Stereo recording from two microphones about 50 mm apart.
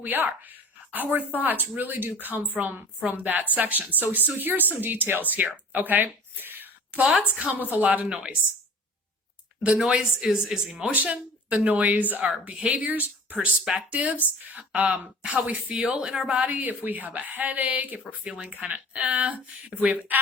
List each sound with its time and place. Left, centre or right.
0.0 s speech: right
7.0 s speech: right
8.1 s speech: centre
9.7 s speech: centre
10.8 s speech: right
15.7 s speech: centre
16.3 s speech: right